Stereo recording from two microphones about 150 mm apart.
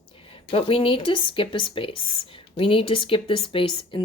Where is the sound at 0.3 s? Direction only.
35° left (ahead or behind).